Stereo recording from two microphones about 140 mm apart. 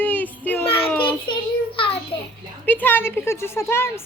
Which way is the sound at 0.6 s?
40° left (ahead or behind).